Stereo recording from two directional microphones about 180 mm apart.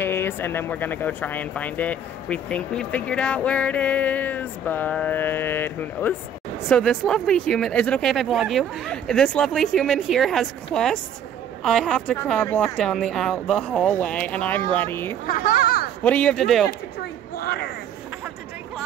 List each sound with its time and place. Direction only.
0.0 s speech: 10° left (ahead or behind)
15.2 s a child's voice: 55° left (ahead or behind)
16.0 s speech: 10° left (ahead or behind)